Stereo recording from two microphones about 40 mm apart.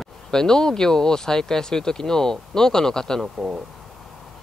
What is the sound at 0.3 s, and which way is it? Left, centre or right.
Speech, centre.